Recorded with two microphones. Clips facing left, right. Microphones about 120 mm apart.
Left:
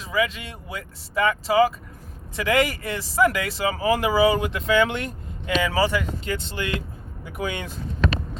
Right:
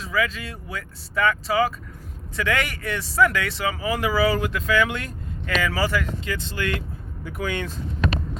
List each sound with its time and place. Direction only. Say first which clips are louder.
0.1 s speech: left 1 dB; 25° left (ahead or behind)
6.2 s speech: left 1 dB; 30° left (ahead or behind)
7.3 s speech: right 1 dB; 15° left (ahead or behind)